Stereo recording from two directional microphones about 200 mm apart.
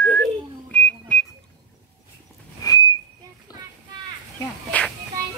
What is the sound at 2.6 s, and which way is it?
Whistling, 15° left (ahead or behind).